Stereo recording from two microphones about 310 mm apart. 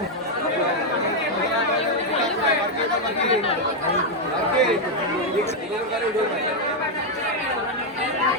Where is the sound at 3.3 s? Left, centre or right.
Centre.